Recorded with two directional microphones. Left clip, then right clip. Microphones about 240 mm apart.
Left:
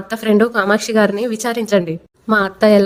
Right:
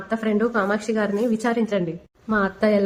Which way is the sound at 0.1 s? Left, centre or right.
Left.